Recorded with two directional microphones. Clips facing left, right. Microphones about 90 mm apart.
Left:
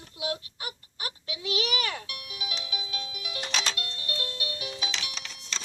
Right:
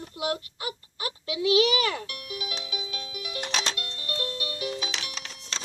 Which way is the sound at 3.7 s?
35° right (ahead or behind).